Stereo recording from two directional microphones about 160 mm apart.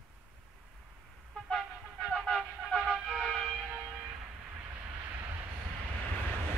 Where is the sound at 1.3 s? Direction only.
Centre (ahead or behind).